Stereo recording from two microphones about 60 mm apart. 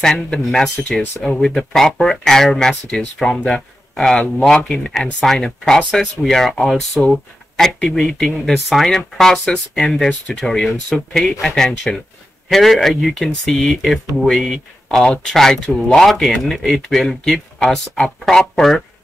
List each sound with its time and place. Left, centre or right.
0.0 s speech: centre